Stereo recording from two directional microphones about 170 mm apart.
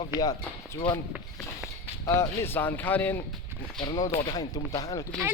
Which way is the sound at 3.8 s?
25° left (ahead or behind).